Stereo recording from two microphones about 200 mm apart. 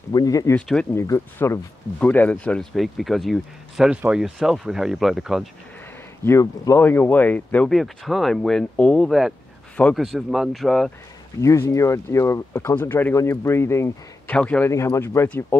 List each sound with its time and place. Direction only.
0.1 s speech: 20° left (ahead or behind); by 5.5 s centre (ahead or behind)
6.2 s speech: 15° left (ahead or behind)
11.4 s speech: 15° left (ahead or behind)